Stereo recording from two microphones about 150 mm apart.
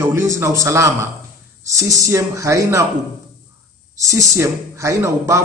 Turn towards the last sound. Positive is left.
turn(degrees=-20)  # may be behind; listen again after turning